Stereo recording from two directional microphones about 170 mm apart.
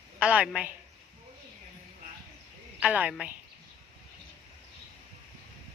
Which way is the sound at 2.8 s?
5° right (ahead or behind).